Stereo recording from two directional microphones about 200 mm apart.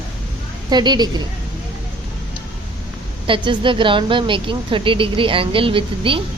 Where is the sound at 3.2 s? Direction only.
25° right (ahead or behind).